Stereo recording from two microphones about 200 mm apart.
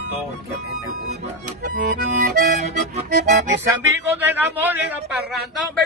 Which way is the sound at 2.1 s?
35° right (ahead or behind).